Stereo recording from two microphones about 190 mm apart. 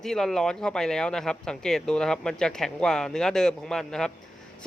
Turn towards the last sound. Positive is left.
turn(degrees=5)  # may be behind; listen again after turning